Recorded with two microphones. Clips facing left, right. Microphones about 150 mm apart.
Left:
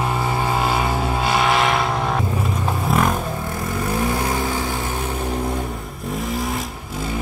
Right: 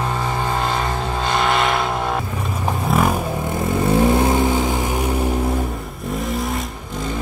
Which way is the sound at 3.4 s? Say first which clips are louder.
Right 5 dB; 25° right (ahead or behind).